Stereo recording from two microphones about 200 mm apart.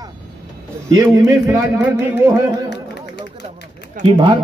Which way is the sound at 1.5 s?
10° right (ahead or behind).